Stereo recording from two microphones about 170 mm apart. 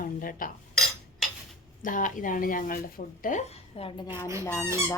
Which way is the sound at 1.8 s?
50° left (ahead or behind).